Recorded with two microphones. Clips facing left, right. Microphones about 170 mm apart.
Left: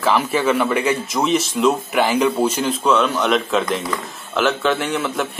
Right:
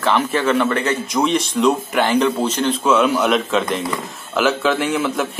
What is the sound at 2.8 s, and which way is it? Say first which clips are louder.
A man's voice: right 2 dB; 5° right (ahead or behind).